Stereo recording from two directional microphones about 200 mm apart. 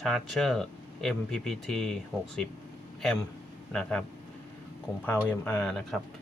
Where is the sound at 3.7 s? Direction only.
5° left (ahead or behind).